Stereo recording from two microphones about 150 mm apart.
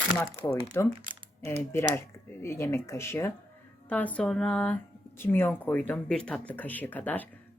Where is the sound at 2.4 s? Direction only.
20° left (ahead or behind).